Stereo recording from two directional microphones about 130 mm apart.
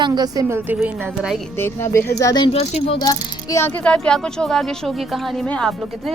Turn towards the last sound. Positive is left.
turn(degrees=5)  # may be behind; listen again after turning